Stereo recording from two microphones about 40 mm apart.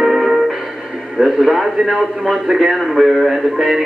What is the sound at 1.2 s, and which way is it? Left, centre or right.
Radio, centre.